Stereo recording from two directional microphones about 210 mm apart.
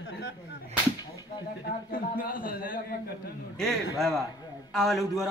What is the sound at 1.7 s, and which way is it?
A man's voice, 40° left (ahead or behind).